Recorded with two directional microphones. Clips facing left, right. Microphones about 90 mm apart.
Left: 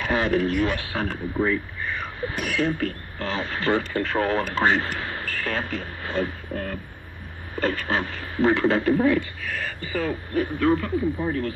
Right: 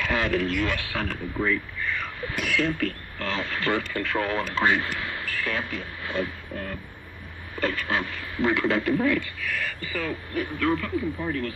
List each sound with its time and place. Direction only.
0.0 s a man's voice: 30° left (ahead or behind)